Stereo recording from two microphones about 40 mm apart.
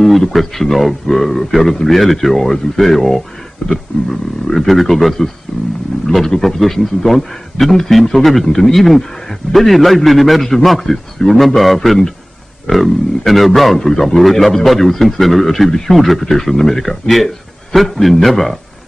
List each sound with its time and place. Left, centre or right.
0.0 s a man's voice: centre
3.6 s roaring cats: left
4.1 s a man's voice: centre